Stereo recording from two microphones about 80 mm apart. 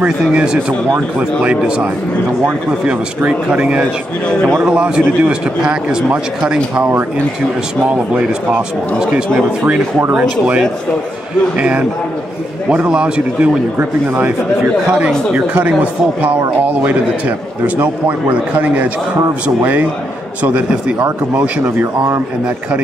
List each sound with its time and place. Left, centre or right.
0.2 s a man's voice: centre
2.9 s a man's voice: centre
4.3 s speech: centre
4.6 s a man's voice: centre; by 7.1 s right
10.1 s a man's voice: centre
13.7 s a man's voice: right
18.5 s a man's voice: centre
21.6 s speech: right